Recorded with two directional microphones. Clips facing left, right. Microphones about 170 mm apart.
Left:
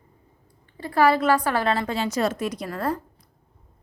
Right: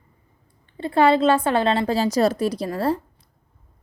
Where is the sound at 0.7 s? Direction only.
25° right (ahead or behind).